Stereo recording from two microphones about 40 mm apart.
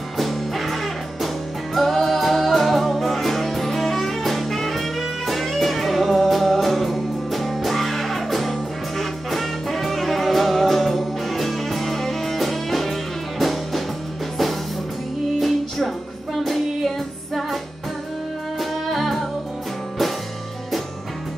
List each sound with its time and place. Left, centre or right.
0.2 s music: centre
1.8 s music: centre
15.3 s music: centre
18.6 s music: centre